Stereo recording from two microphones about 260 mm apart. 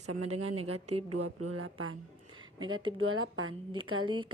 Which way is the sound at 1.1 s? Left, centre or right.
Right.